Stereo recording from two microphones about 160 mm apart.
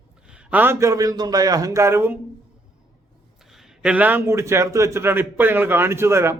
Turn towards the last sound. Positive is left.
turn(degrees=-15)  # may be behind; listen again after turning